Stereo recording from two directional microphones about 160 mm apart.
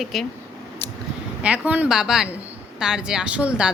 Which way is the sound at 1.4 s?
10° right (ahead or behind).